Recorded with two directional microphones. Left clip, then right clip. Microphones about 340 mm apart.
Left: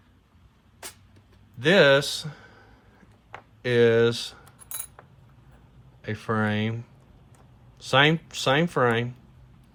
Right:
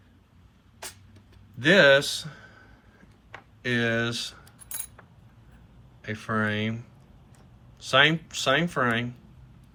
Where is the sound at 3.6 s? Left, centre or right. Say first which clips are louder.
Left 7 dB; centre.